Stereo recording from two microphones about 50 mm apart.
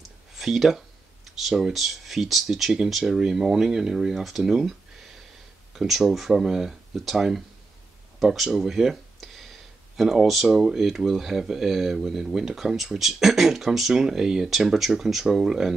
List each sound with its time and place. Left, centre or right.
0.4 s speech: centre
5.8 s speech: centre
9.2 s a sound: centre
9.9 s speech: centre